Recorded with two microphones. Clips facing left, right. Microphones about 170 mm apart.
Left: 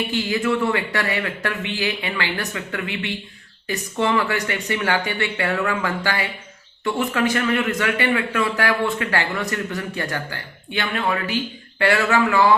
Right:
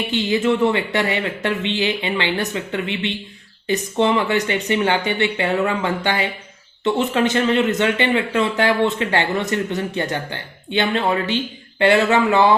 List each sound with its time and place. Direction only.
0.1 s speech: 20° right (ahead or behind)